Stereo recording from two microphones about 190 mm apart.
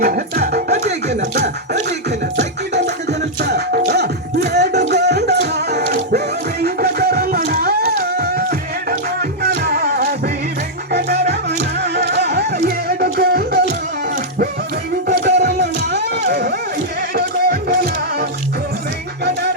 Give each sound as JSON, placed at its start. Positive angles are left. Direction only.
{"t": 0.0, "sound": "music", "side_deg": -55}
{"t": 2.7, "sound": "music", "side_deg": -60}
{"t": 11.9, "sound": "music", "side_deg": -60}
{"t": 15.0, "sound": "music", "side_deg": -60}